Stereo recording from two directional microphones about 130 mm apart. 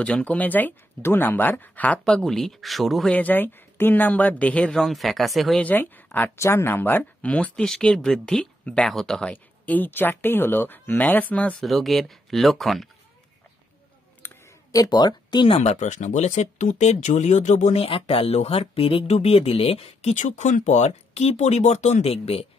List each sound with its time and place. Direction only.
0.0 s speech: 10° left (ahead or behind)
3.2 s speech: 15° left (ahead or behind)
5.6 s speech: 15° left (ahead or behind)
11.6 s speech: centre (ahead or behind)
14.2 s speech: 20° left (ahead or behind); by 22.5 s 50° left (ahead or behind)